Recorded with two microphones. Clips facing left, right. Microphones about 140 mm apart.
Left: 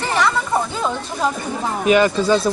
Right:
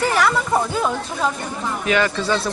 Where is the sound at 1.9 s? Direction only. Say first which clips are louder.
Left 5 dB; 15° left (ahead or behind).